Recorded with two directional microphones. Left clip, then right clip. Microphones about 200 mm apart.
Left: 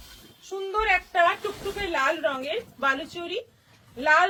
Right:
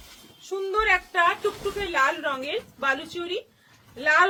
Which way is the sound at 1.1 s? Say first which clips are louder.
Even; 20° right (ahead or behind).